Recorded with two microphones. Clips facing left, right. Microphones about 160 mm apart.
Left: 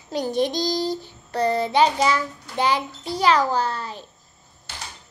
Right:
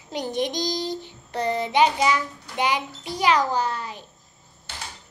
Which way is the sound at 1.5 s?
15° right (ahead or behind).